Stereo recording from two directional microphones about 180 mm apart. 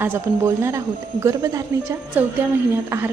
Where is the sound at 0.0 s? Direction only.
15° right (ahead or behind).